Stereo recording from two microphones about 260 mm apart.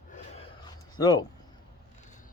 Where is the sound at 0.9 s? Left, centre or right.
Centre.